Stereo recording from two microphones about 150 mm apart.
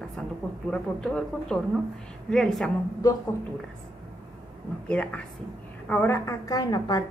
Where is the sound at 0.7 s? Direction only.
5° left (ahead or behind).